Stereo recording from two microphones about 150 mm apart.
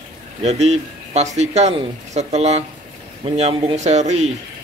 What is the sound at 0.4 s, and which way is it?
Speech, 45° right (ahead or behind).